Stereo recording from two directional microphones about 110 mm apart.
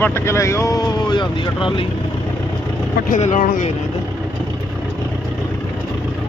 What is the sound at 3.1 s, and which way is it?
Speech, 90° left.